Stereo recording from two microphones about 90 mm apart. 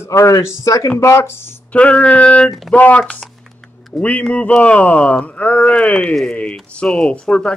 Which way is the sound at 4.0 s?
15° left (ahead or behind).